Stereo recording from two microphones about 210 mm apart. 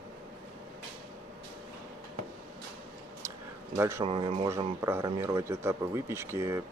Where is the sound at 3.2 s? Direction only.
15° right (ahead or behind).